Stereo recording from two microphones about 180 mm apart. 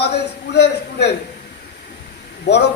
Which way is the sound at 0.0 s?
65° left (ahead or behind).